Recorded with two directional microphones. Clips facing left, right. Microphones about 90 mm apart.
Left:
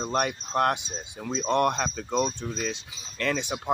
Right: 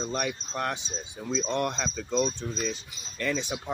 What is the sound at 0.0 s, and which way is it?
Speech, 50° left (ahead or behind).